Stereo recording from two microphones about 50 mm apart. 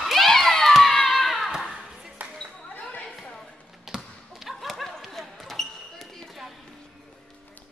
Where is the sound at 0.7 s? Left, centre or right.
Centre.